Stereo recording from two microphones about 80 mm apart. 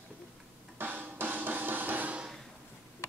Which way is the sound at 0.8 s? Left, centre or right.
Right.